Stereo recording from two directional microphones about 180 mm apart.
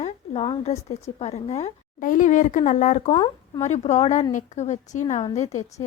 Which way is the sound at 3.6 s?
40° left (ahead or behind).